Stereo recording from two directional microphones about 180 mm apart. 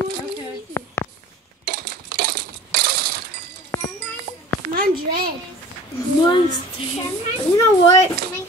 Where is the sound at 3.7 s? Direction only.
15° left (ahead or behind).